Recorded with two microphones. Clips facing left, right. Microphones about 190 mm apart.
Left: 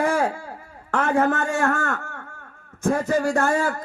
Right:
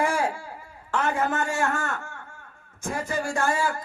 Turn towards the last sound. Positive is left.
turn(degrees=60)  # may be behind; listen again after turning